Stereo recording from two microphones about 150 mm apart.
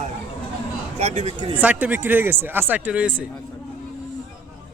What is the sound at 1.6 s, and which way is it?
Speech, 10° right (ahead or behind).